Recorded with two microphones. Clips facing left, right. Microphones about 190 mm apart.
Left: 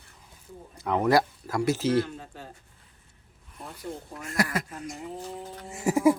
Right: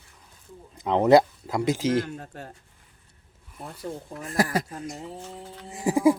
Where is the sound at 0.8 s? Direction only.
20° right (ahead or behind).